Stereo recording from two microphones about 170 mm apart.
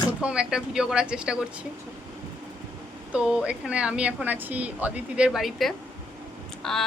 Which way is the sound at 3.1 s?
5° right (ahead or behind).